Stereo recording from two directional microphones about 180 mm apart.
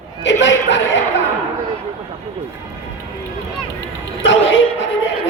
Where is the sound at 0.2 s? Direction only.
80° left.